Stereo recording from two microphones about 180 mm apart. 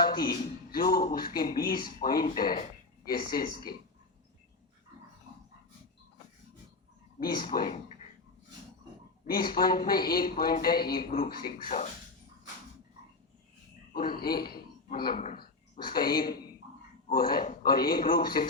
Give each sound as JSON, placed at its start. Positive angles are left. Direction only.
{"t": 0.0, "sound": "speech", "side_deg": 55}
{"t": 7.2, "sound": "speech", "side_deg": 55}
{"t": 9.2, "sound": "speech", "side_deg": 55}
{"t": 13.9, "sound": "speech", "side_deg": 55}
{"t": 15.1, "sound": "speech", "side_deg": 40}
{"t": 16.0, "sound": "speech", "side_deg": 55}